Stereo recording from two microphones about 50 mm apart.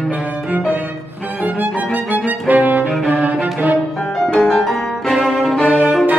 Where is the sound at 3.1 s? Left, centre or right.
Right.